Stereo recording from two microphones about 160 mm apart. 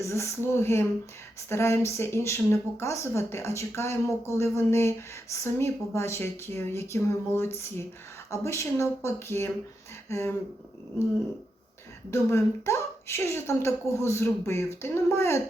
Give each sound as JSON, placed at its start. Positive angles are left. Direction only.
{"t": 0.0, "sound": "speech", "side_deg": 15}
{"t": 12.1, "sound": "speech", "side_deg": 15}